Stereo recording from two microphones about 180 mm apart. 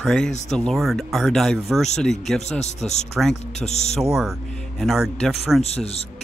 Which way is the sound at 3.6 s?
40° left (ahead or behind).